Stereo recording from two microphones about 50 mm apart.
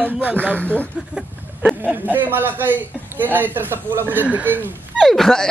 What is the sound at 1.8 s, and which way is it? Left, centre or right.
A man's voice, right.